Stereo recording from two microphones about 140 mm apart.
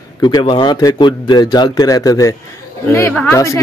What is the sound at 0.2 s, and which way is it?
Speech, 35° left (ahead or behind).